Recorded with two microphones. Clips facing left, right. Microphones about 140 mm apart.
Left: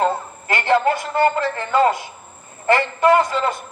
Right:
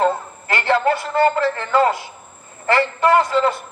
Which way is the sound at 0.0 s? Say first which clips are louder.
Right 1 dB; 15° left (ahead or behind).